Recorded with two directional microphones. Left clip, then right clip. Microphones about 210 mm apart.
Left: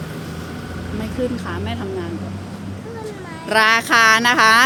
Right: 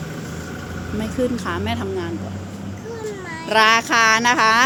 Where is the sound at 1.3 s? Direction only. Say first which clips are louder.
Right 3 dB; 20° right (ahead or behind).